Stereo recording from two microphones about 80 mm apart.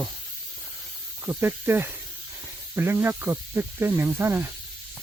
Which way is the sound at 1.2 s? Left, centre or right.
Right.